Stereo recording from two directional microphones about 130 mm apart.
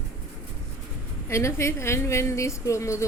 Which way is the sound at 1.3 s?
20° left (ahead or behind).